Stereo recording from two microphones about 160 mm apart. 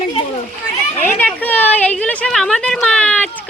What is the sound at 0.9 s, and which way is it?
A woman's voice, 10° left (ahead or behind).